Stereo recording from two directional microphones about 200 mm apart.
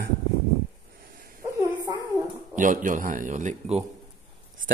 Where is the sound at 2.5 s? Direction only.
40° right (ahead or behind).